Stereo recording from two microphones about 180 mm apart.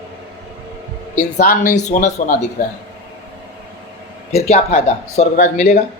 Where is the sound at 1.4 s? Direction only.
55° left (ahead or behind).